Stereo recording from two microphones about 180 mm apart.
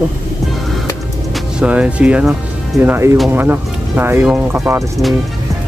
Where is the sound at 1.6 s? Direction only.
5° right (ahead or behind).